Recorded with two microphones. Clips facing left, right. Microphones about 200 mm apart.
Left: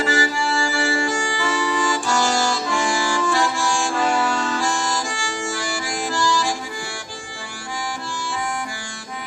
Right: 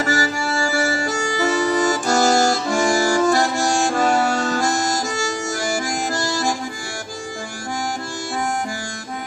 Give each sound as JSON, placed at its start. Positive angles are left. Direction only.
{"t": 0.0, "sound": "music", "side_deg": -45}
{"t": 8.2, "sound": "harmonica", "side_deg": -45}